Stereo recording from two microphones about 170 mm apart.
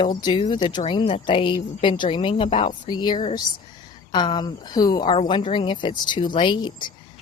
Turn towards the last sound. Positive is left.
turn(degrees=25)  # may be behind; listen again after turning